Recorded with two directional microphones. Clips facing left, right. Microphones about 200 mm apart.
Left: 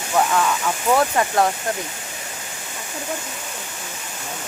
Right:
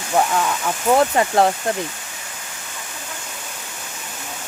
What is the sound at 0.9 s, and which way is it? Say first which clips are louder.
Speech: right 3 dB; 25° right (ahead or behind).